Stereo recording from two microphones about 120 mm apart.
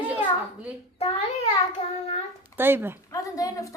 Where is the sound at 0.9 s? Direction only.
55° left (ahead or behind).